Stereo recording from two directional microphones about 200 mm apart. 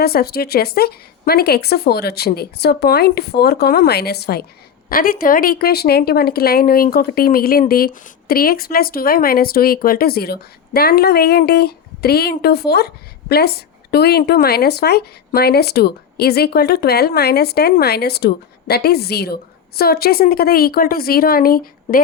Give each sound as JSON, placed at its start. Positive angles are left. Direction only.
{"t": 0.0, "sound": "speech", "side_deg": 50}